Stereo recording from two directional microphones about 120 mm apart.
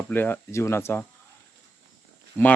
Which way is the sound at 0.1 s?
15° left (ahead or behind).